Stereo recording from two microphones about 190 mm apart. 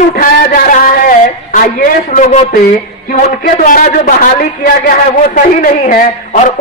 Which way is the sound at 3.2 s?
45° left (ahead or behind).